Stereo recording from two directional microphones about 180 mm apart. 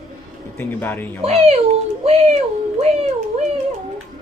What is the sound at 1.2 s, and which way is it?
Speech, 35° right (ahead or behind).